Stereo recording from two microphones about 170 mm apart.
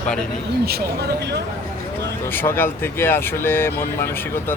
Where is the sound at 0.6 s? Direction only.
70° right (ahead or behind).